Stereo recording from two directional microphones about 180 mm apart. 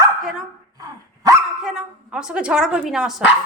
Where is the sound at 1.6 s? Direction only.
5° right (ahead or behind).